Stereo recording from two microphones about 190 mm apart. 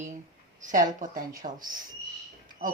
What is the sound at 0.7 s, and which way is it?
Speech, 45° right (ahead or behind).